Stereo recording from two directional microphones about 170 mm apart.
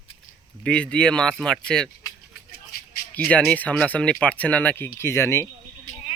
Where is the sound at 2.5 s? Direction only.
65° left (ahead or behind).